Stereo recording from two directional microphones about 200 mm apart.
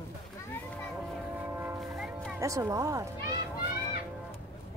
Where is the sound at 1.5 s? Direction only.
10° right (ahead or behind).